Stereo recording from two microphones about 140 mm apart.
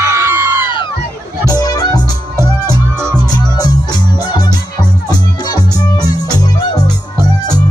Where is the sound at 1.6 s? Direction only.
30° left (ahead or behind).